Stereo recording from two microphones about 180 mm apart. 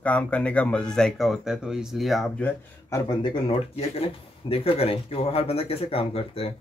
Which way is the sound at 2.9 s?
25° left (ahead or behind).